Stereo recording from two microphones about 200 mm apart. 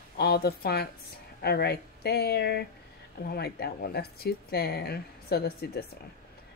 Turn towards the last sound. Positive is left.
turn(degrees=50)  # may be behind; listen again after turning